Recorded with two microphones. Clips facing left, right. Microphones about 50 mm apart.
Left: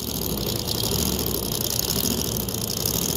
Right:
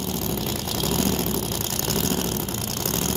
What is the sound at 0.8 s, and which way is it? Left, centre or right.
Vehicle, right.